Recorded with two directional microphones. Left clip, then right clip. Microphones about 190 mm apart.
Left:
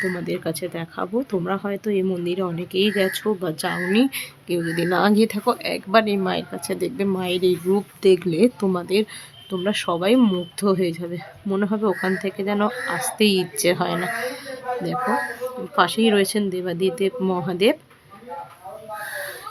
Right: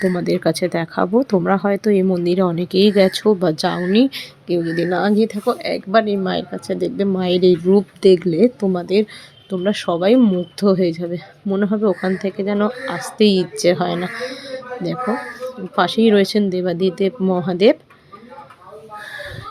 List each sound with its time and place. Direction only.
0.0 s speech: 25° right (ahead or behind)